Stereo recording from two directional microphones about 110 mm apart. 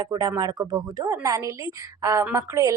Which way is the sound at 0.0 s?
35° right (ahead or behind).